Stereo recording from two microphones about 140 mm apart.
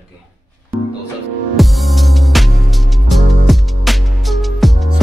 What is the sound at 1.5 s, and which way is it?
Music, centre (ahead or behind).